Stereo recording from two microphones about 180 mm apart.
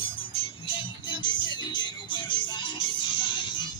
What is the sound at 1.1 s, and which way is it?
Music, 25° left (ahead or behind).